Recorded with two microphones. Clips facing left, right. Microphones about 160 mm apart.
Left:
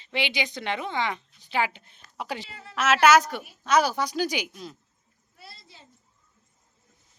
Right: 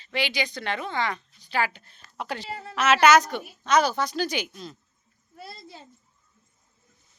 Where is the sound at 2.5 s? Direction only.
40° right (ahead or behind).